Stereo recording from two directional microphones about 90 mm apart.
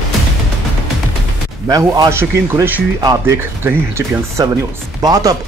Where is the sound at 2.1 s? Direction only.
30° right (ahead or behind).